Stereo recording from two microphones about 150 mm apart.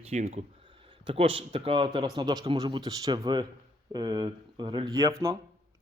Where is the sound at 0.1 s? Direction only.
45° right (ahead or behind).